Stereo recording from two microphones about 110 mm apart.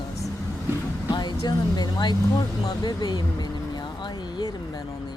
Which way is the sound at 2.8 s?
40° left (ahead or behind).